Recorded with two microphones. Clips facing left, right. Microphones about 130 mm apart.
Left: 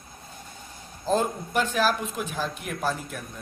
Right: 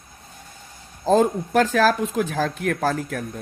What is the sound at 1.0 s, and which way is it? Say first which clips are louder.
Speech: right 7 dB; 90° right.